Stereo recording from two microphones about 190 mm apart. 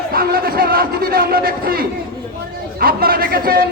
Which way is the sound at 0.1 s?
50° right (ahead or behind).